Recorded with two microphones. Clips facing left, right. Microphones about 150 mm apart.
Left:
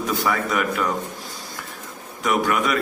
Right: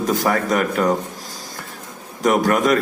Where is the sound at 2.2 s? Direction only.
40° right (ahead or behind).